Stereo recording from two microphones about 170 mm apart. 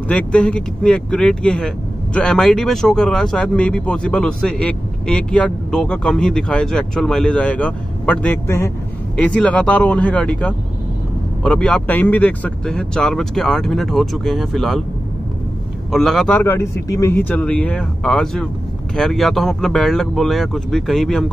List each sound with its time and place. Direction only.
0.1 s a man's voice: 5° left (ahead or behind)
15.9 s a man's voice: centre (ahead or behind)